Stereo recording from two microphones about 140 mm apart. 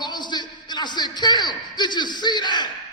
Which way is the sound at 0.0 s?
30° left (ahead or behind).